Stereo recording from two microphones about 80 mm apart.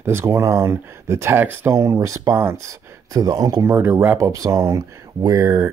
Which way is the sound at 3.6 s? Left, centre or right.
Right.